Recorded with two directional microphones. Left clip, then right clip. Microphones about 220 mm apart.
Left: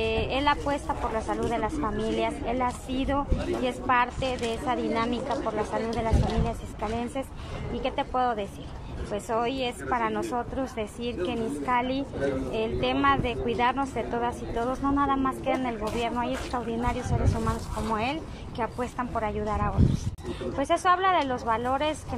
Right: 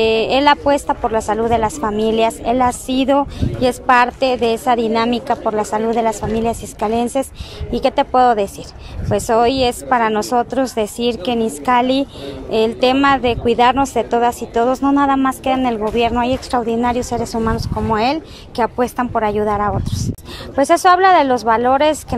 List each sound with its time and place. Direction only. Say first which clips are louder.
0.0 s speech: right 13 dB; 50° right (ahead or behind)